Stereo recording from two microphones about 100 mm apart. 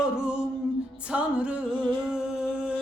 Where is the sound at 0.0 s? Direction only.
10° right (ahead or behind).